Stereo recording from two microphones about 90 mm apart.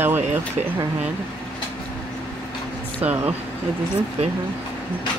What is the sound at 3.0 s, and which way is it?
Speech, 20° right (ahead or behind).